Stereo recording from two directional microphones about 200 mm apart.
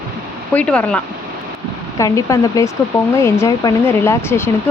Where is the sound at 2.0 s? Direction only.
15° left (ahead or behind).